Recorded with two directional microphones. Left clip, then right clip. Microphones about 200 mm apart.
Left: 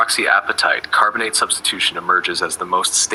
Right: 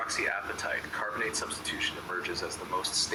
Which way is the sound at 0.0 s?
45° left (ahead or behind).